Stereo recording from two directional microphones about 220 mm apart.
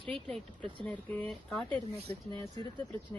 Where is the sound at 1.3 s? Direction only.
5° left (ahead or behind).